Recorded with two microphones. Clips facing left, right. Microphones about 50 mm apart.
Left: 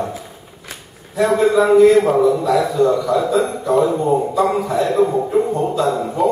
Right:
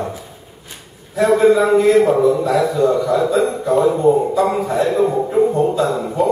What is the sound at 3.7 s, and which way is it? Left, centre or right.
A man's voice, centre.